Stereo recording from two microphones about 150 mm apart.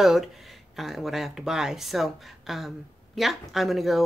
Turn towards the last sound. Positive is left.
turn(degrees=0)  # may be behind; listen again after turning